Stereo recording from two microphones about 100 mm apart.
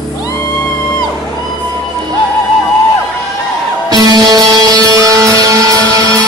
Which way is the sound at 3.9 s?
40° right (ahead or behind).